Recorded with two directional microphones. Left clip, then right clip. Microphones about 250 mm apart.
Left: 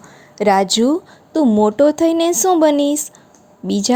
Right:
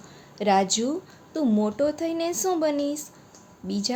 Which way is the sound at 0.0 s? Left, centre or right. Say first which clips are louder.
Left 10 dB; left.